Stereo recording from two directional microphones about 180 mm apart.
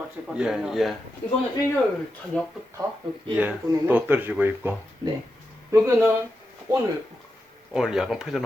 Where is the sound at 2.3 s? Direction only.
5° left (ahead or behind).